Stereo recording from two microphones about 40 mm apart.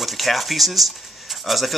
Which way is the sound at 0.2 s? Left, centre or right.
Centre.